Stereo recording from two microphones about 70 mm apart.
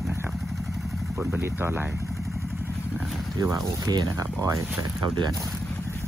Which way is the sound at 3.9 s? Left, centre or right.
Right.